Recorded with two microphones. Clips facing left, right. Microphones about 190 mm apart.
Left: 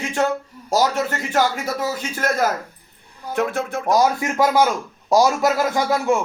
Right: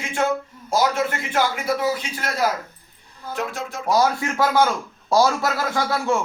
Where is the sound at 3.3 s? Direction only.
60° left (ahead or behind).